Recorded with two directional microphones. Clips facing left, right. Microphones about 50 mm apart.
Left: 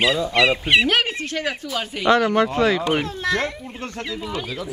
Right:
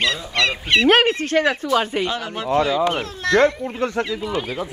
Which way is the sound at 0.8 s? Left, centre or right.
Right.